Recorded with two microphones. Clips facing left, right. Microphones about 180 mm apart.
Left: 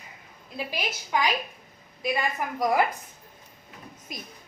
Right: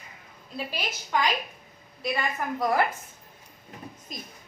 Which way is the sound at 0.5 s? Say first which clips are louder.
Left 1 dB; 10° left (ahead or behind).